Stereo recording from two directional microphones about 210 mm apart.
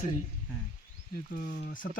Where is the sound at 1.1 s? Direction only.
40° left (ahead or behind).